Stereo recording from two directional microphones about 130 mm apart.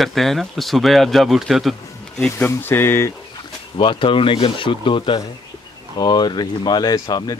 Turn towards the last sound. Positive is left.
turn(degrees=30)  # may be behind; listen again after turning